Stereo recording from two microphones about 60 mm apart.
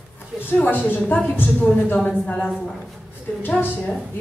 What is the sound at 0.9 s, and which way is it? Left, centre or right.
A woman's voice, left.